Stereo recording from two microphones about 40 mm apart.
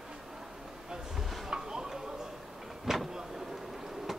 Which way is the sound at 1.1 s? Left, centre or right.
Centre.